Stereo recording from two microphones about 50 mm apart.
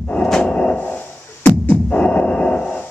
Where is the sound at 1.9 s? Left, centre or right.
Left.